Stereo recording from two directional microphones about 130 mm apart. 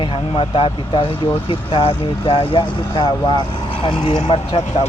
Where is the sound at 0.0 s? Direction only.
45° left (ahead or behind).